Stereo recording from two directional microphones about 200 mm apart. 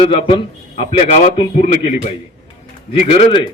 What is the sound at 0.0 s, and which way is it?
A man's voice, 25° left (ahead or behind).